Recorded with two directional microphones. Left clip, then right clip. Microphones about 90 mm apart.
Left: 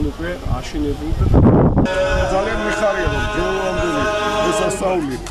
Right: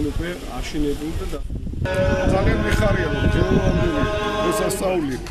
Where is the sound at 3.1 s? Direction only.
30° left (ahead or behind).